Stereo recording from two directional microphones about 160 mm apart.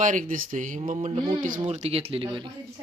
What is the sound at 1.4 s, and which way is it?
Speech, 50° right (ahead or behind).